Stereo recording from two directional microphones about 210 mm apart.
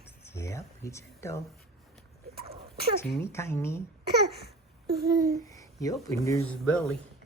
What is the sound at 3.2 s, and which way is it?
Speech, 10° left (ahead or behind).